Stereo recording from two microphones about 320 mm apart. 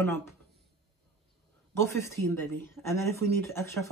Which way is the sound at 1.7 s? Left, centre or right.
Centre.